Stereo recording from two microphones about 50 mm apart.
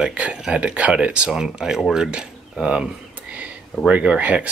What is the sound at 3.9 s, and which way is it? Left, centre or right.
Speech, right.